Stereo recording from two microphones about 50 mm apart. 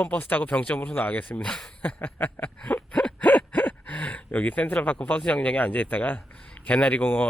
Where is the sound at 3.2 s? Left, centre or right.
Left.